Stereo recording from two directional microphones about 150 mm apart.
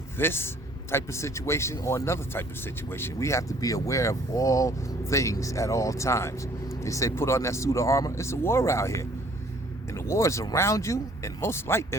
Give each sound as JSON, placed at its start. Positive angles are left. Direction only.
{"t": 0.2, "sound": "a man's voice", "side_deg": 15}